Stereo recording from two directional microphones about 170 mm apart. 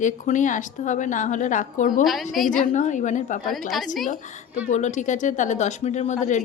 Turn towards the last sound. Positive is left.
turn(degrees=45)  # may be behind; listen again after turning